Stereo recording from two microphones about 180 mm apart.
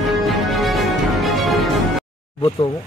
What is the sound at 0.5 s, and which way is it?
Music, centre (ahead or behind).